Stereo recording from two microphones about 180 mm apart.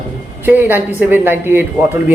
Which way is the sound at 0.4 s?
10° right (ahead or behind).